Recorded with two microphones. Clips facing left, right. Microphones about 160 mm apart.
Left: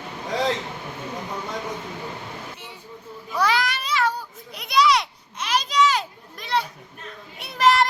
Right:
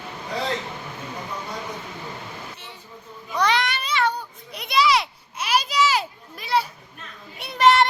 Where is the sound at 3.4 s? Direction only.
5° left (ahead or behind).